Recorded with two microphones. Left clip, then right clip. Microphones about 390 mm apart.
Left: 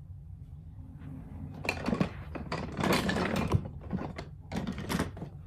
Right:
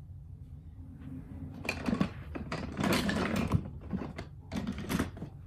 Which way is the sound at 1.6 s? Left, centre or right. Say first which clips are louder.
Left 2 dB; left.